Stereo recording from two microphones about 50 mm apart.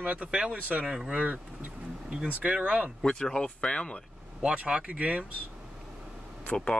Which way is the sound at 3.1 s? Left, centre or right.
Centre.